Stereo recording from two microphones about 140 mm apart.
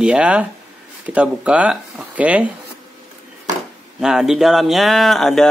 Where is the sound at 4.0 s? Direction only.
5° right (ahead or behind).